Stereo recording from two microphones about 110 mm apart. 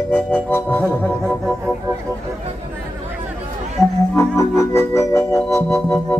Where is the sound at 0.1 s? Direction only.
15° left (ahead or behind).